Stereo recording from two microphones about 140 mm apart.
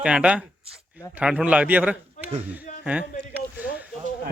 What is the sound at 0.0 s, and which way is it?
Speech, 5° right (ahead or behind).